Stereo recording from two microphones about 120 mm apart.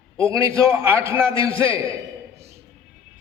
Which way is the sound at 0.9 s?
20° right (ahead or behind).